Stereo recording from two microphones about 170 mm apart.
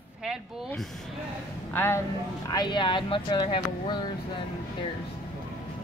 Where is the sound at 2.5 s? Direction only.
25° left (ahead or behind).